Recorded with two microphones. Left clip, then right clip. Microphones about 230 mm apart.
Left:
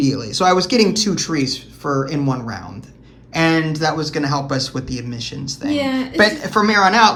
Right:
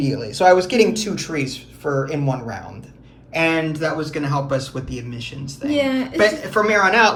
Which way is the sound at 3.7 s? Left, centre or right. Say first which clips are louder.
Left 3 dB; centre.